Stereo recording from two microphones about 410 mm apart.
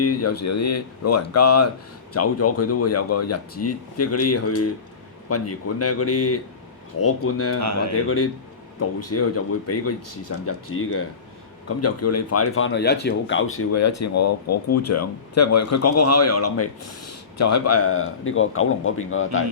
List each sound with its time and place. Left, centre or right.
0.0 s speech: left
7.6 s speech: right
7.9 s speech: left